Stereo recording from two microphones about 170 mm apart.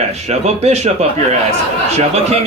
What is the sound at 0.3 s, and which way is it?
Speech, 40° right (ahead or behind).